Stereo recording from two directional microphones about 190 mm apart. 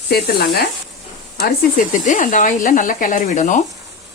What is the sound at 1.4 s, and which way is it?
Speech, 40° left (ahead or behind).